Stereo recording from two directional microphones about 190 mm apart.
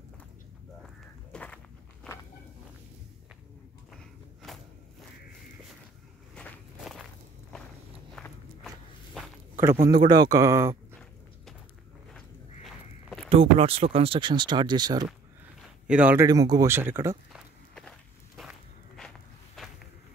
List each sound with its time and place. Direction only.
0.8 s a sound: 5° left (ahead or behind)
3.9 s a sound: centre (ahead or behind)
6.3 s walk: centre (ahead or behind)
8.2 s walk: centre (ahead or behind)
9.8 s speech: 20° right (ahead or behind)
12.6 s walk: centre (ahead or behind)
13.3 s speech: 30° right (ahead or behind)
15.9 s speech: 10° right (ahead or behind)
16.3 s speech: 20° right (ahead or behind)
17.3 s walk: centre (ahead or behind)